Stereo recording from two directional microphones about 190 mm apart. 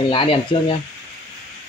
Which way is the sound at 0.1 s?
30° left (ahead or behind).